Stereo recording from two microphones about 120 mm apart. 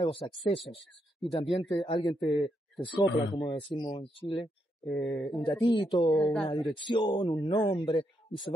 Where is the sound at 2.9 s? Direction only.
40° left (ahead or behind).